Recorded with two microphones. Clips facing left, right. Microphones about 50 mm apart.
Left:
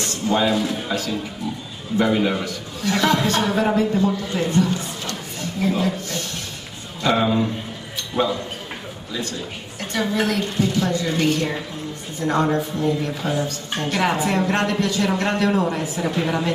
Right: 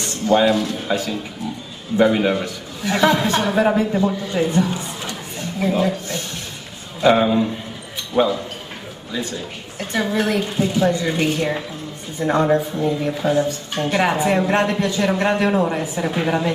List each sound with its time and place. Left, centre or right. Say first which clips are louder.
0.0 s a sound: right 4 dB; centre
0.5 s a man's voice: right 2 dB; centre
0.8 s a man's voice: right 3 dB; centre
1.9 s a woman's voice: right 4 dB; centre
2.4 s a woman's voice: even; centre
9.8 s a woman's voice: right 2 dB; centre
10.2 s a woman's voice: right 1 dB; centre